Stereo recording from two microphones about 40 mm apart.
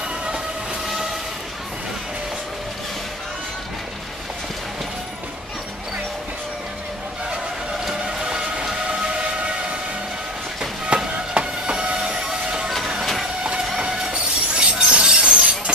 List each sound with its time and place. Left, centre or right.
7.8 s a sound: centre
10.6 s music: centre
11.3 s train: right
13.7 s train: right